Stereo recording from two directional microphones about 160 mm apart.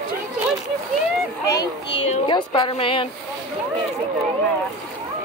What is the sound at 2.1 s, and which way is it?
A woman's voice, 30° left (ahead or behind).